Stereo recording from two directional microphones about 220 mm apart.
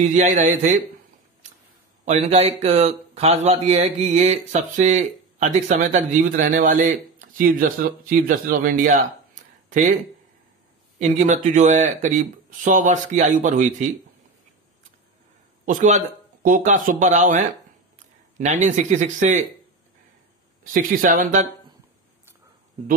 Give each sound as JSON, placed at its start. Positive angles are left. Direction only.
{"t": 0.0, "sound": "speech", "side_deg": -35}
{"t": 2.0, "sound": "speech", "side_deg": -30}
{"t": 11.0, "sound": "speech", "side_deg": -30}
{"t": 15.6, "sound": "speech", "side_deg": -35}
{"t": 20.7, "sound": "speech", "side_deg": -40}